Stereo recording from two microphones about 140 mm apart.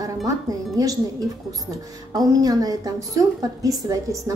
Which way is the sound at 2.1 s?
25° right (ahead or behind).